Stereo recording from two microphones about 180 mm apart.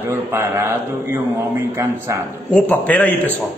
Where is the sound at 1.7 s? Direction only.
15° right (ahead or behind).